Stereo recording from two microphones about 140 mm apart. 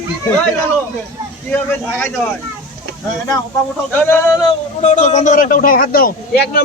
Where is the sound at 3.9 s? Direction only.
15° left (ahead or behind).